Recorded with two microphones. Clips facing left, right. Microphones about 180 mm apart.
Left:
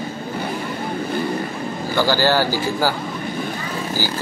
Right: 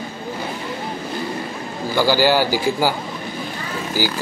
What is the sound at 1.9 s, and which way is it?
A man's voice, 10° right (ahead or behind).